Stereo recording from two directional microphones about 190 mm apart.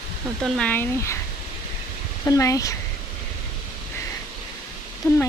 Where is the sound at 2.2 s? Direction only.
15° left (ahead or behind).